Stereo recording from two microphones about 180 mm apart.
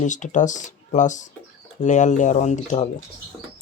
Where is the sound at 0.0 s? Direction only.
45° left (ahead or behind).